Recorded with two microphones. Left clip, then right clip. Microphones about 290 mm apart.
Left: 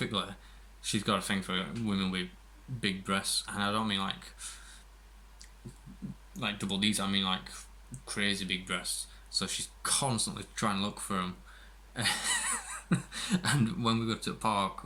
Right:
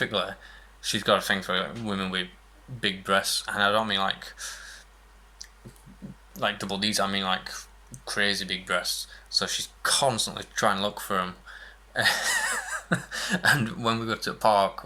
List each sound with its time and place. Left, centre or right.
0.0 s speech: centre
6.3 s speech: centre
14.0 s speech: right